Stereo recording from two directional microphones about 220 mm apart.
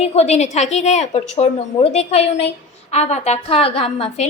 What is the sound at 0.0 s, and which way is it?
A woman's voice, 30° left (ahead or behind).